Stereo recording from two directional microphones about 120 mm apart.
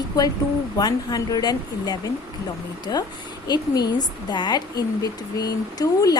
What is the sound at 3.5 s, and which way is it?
A woman's voice, 35° left (ahead or behind).